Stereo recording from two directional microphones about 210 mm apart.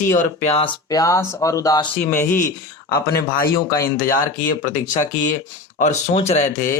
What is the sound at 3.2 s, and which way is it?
Speech, 45° left (ahead or behind).